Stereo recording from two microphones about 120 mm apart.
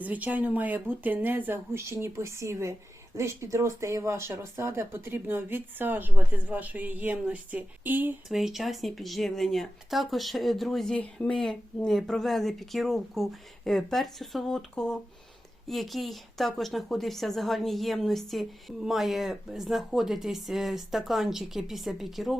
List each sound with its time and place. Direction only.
0.0 s speech: 15° right (ahead or behind)
8.3 s speech: 5° right (ahead or behind)